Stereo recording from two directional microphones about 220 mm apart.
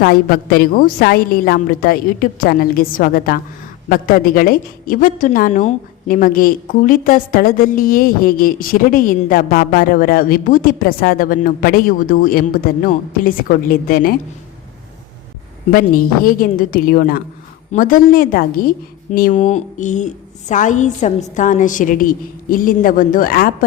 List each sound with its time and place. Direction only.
0.0 s a woman's voice: 45° left (ahead or behind)
15.7 s a woman's voice: 40° left (ahead or behind)